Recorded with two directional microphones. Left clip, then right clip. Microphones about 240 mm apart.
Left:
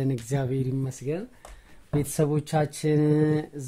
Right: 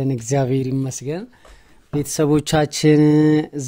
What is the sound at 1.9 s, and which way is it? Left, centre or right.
Speech, centre.